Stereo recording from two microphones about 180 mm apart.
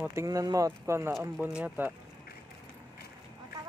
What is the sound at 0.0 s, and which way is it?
Speech, 15° right (ahead or behind).